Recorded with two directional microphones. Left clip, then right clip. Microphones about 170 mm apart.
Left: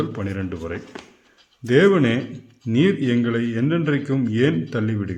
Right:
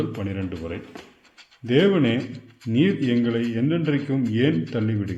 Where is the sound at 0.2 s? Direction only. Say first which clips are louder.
Left 2 dB; 15° left (ahead or behind).